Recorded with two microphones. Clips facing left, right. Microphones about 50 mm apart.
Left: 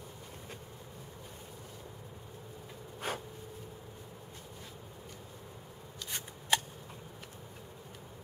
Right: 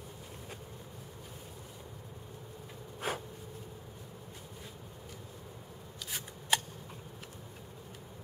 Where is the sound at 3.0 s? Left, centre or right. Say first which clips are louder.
Right 1 dB; centre.